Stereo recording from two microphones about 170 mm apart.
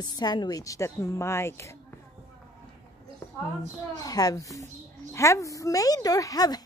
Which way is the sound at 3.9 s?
20° left (ahead or behind).